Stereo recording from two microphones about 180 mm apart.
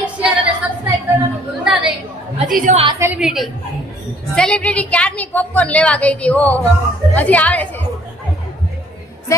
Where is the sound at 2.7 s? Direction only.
30° right (ahead or behind).